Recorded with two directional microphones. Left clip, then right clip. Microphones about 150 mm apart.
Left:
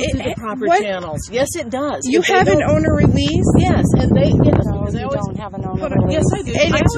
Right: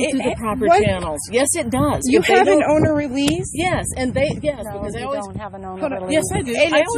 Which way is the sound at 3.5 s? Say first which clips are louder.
Left 4 dB; 20° right (ahead or behind).